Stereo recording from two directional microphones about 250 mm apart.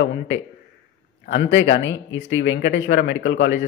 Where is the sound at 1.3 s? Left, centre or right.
Left.